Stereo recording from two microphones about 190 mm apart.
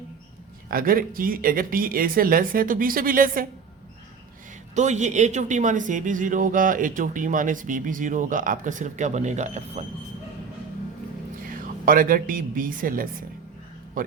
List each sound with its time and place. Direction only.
0.7 s speech: 50° right (ahead or behind)
4.7 s speech: 40° right (ahead or behind)
11.4 s a woman's voice: 45° right (ahead or behind)